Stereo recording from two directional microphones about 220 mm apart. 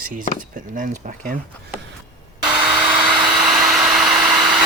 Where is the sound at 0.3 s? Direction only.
35° right (ahead or behind).